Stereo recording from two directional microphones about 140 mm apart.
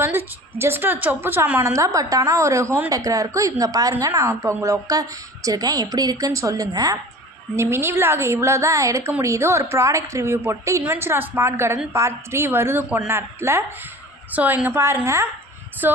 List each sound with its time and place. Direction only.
0.0 s a woman's voice: 15° right (ahead or behind)